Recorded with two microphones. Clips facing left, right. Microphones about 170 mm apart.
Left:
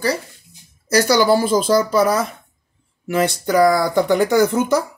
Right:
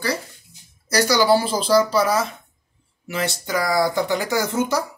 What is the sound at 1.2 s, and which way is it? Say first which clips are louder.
Speech: left 3 dB; 50° left (ahead or behind).